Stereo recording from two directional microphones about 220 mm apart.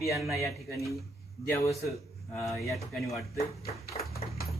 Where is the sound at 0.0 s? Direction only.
Centre (ahead or behind).